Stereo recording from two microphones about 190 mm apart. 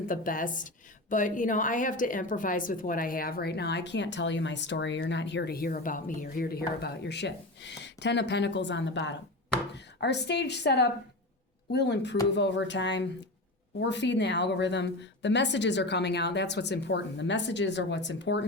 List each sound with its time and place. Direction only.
0.1 s a woman's voice: 45° left (ahead or behind); by 18.4 s 70° left (ahead or behind)